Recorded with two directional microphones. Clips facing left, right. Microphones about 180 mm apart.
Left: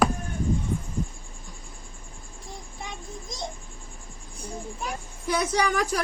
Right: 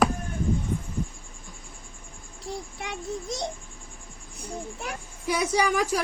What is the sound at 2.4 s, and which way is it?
Child singing, 75° right (ahead or behind).